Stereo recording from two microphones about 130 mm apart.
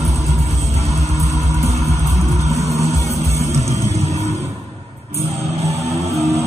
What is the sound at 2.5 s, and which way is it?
Music, 25° right (ahead or behind).